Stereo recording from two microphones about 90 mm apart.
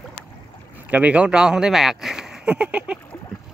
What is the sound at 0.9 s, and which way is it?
Speech, 15° right (ahead or behind).